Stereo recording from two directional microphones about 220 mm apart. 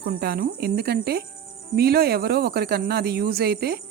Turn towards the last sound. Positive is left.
turn(degrees=-45)  # may be behind; listen again after turning